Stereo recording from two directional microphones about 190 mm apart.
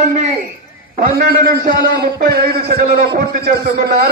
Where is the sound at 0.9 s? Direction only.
50° right (ahead or behind).